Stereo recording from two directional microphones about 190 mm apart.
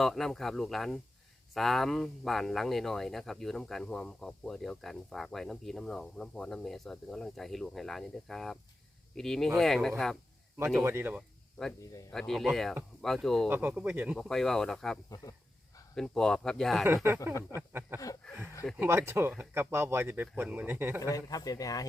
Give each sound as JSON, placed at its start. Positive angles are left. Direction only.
{"t": 0.0, "sound": "speech", "side_deg": 0}
{"t": 10.8, "sound": "speech", "side_deg": -10}
{"t": 12.1, "sound": "speech", "side_deg": 0}
{"t": 13.5, "sound": "speech", "side_deg": -10}
{"t": 15.1, "sound": "speech", "side_deg": 20}
{"t": 16.0, "sound": "speech", "side_deg": 5}
{"t": 16.8, "sound": "speech", "side_deg": -15}
{"t": 18.2, "sound": "a sound", "side_deg": 5}
{"t": 18.8, "sound": "speech", "side_deg": -10}
{"t": 21.0, "sound": "speech", "side_deg": 20}